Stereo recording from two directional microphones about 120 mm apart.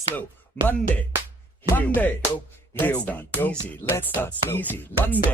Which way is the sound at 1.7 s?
15° left (ahead or behind).